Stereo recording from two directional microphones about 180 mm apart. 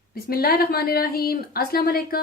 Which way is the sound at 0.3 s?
55° left (ahead or behind).